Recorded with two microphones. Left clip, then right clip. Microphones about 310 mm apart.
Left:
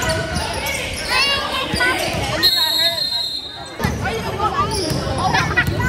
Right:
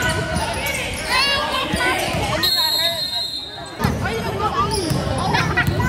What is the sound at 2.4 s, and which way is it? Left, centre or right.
Basketball bounce, centre.